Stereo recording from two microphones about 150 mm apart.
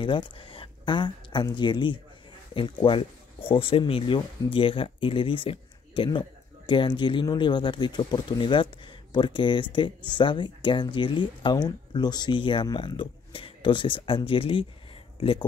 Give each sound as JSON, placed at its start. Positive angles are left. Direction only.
{"t": 0.0, "sound": "speech", "side_deg": 35}